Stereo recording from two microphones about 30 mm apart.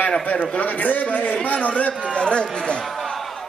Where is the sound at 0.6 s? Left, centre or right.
Left.